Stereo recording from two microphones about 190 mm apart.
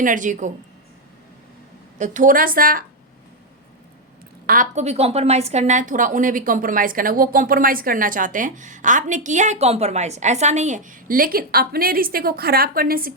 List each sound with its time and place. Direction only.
0.0 s a woman's voice: 45° right (ahead or behind)
2.0 s a woman's voice: 45° right (ahead or behind)
4.4 s a woman's voice: 45° right (ahead or behind)